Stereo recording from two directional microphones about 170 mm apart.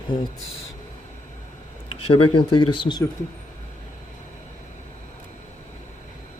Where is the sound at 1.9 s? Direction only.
35° left (ahead or behind).